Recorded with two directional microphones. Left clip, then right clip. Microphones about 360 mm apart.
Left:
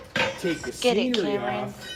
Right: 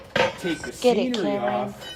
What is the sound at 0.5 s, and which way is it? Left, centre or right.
A woman's voice, centre.